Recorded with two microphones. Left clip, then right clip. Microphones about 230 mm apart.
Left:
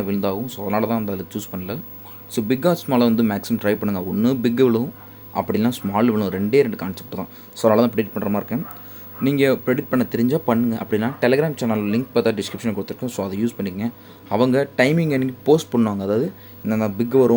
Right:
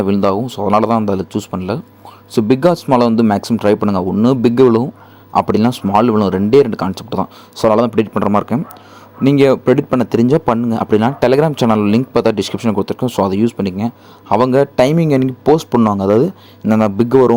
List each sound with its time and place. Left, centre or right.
0.0 s a man's voice: right